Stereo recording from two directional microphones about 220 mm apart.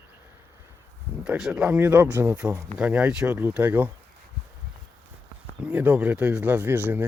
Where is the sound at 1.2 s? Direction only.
Centre (ahead or behind).